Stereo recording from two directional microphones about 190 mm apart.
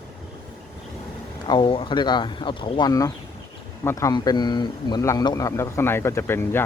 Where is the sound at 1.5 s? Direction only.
25° left (ahead or behind).